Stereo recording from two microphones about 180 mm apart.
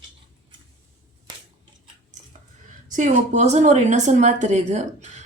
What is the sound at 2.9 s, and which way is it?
A woman's voice, 40° right (ahead or behind).